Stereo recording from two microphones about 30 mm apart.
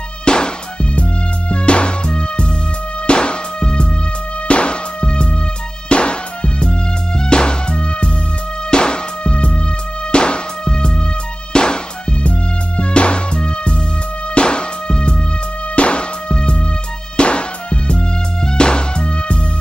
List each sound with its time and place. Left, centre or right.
0.2 s music: left
1.5 s music: left
2.0 s music: left